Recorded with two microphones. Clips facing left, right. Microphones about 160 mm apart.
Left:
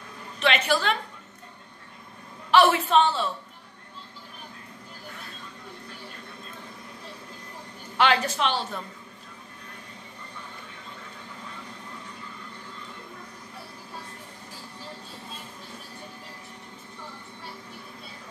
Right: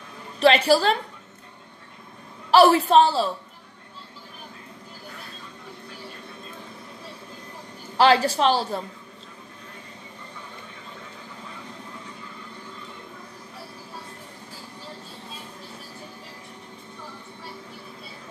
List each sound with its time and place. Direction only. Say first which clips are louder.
0.4 s a woman's voice: right 7 dB; 35° right (ahead or behind)
2.5 s a woman's voice: right 4 dB; 35° right (ahead or behind)
8.0 s a woman's voice: right 5 dB; 35° right (ahead or behind)